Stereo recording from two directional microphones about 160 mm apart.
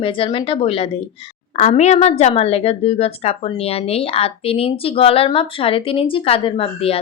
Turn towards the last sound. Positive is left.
turn(degrees=35)  # may be behind; listen again after turning